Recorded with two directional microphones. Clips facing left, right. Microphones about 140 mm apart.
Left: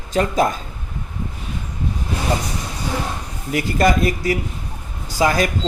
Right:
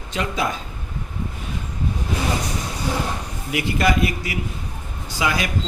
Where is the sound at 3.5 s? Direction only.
40° left (ahead or behind).